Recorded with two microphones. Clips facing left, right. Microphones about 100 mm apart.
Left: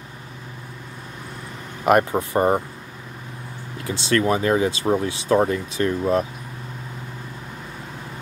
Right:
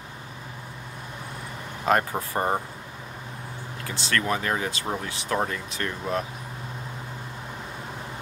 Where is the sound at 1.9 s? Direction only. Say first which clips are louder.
Left 6 dB; 20° left (ahead or behind).